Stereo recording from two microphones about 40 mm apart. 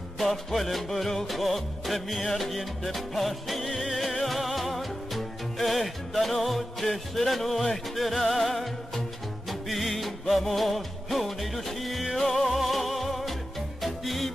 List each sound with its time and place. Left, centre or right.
0.2 s music: centre